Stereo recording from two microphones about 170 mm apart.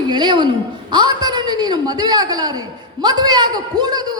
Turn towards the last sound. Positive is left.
turn(degrees=-25)  # may be behind; listen again after turning